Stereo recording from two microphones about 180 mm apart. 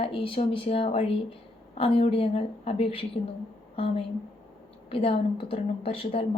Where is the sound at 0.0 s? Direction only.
30° left (ahead or behind).